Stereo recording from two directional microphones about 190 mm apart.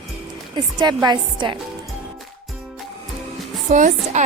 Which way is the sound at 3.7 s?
40° right (ahead or behind).